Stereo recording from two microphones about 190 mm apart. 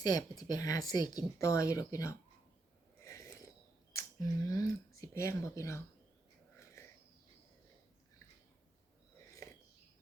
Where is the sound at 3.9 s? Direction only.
15° left (ahead or behind).